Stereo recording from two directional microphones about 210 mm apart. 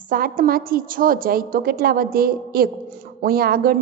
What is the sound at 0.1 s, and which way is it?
Speech, 45° right (ahead or behind).